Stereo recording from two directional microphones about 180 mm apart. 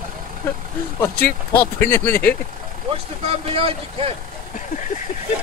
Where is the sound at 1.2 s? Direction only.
60° left (ahead or behind).